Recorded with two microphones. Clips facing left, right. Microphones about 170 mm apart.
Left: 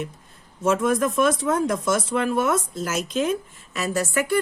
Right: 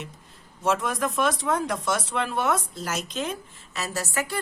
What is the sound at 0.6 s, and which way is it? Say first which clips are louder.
Speech: left 5 dB; 50° left (ahead or behind).